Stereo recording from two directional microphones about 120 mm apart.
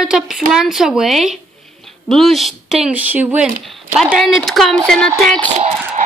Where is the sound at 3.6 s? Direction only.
Centre (ahead or behind).